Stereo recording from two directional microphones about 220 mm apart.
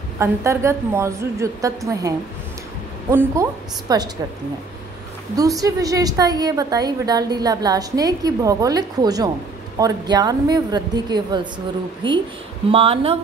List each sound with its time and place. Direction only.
0.2 s a woman's voice: 10° right (ahead or behind)
5.3 s a woman's voice: 15° right (ahead or behind)